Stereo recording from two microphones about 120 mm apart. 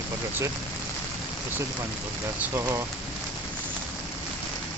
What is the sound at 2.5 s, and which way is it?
Speech, 25° right (ahead or behind).